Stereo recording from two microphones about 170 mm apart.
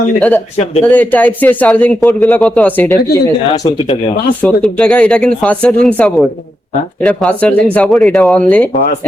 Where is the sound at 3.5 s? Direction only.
20° left (ahead or behind).